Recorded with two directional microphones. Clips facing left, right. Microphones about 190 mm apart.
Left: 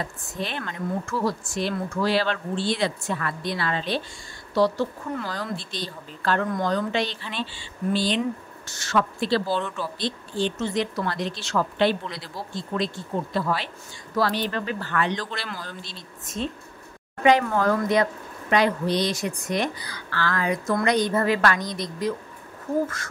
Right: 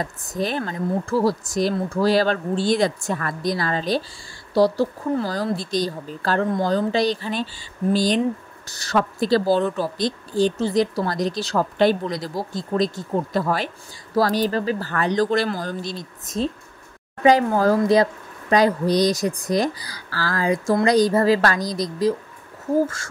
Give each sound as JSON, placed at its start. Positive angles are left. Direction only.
{"t": 0.0, "sound": "speech", "side_deg": -40}